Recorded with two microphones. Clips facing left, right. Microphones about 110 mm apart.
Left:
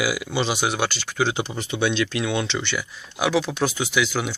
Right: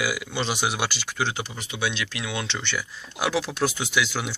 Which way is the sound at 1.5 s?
35° left (ahead or behind).